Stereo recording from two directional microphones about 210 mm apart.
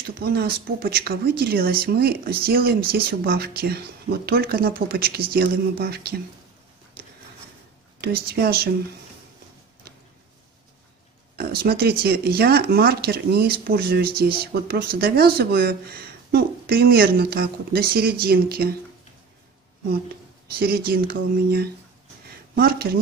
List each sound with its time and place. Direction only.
0.0 s speech: 45° right (ahead or behind)
8.0 s speech: 50° right (ahead or behind)
11.3 s speech: 45° right (ahead or behind)
20.5 s speech: 45° right (ahead or behind)